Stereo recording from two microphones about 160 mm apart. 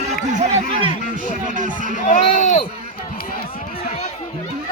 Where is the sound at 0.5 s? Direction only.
35° right (ahead or behind).